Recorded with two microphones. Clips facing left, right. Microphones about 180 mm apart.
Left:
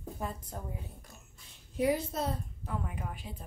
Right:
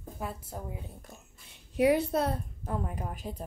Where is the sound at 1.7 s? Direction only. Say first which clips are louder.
Right 5 dB; 70° right (ahead or behind).